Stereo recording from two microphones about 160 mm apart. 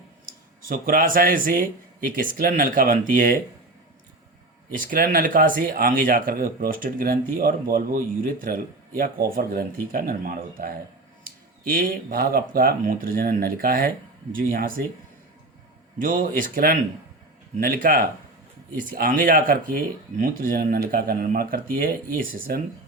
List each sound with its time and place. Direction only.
0.7 s speech: 60° right (ahead or behind)
4.8 s speech: 60° right (ahead or behind)
16.0 s speech: 60° right (ahead or behind)